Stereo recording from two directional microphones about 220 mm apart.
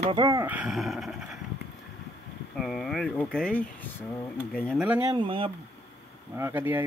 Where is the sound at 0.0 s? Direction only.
15° right (ahead or behind); by 1.4 s centre (ahead or behind).